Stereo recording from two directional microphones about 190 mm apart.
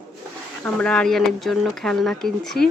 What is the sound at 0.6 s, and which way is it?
Speech, 5° left (ahead or behind).